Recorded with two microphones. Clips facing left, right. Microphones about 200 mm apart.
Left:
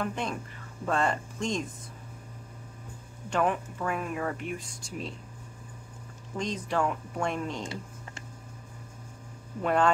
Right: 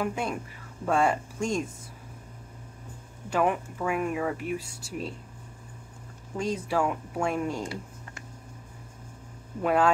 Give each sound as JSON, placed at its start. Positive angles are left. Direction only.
{"t": 0.0, "sound": "speech", "side_deg": -10}
{"t": 3.3, "sound": "speech", "side_deg": -10}
{"t": 6.3, "sound": "speech", "side_deg": -10}
{"t": 7.6, "sound": "a sound", "side_deg": 25}
{"t": 9.6, "sound": "speech", "side_deg": -5}